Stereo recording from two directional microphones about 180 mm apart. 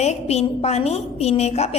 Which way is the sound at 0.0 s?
35° left (ahead or behind).